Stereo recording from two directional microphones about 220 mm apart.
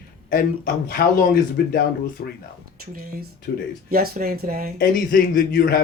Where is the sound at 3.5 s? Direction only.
45° left (ahead or behind).